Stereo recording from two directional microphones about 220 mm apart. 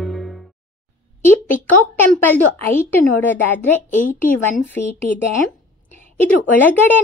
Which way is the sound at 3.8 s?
35° left (ahead or behind).